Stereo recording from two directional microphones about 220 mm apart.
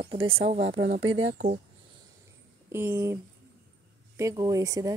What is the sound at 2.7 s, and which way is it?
Speech, 10° right (ahead or behind).